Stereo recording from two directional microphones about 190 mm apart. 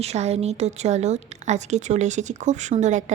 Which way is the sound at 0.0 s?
35° right (ahead or behind).